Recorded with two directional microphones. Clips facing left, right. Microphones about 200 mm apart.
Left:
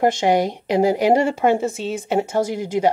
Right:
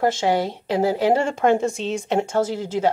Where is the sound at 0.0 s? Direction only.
15° left (ahead or behind).